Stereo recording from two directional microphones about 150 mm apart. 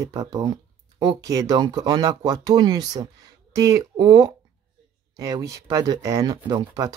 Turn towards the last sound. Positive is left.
turn(degrees=-25)  # may be behind; listen again after turning